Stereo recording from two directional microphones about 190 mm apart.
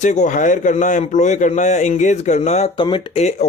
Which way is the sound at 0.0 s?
40° left (ahead or behind).